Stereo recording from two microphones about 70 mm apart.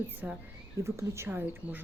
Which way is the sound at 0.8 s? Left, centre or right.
Right.